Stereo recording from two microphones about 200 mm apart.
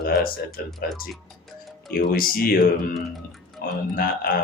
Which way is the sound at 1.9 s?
45° left (ahead or behind).